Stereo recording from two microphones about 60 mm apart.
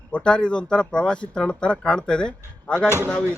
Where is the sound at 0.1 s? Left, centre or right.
Centre.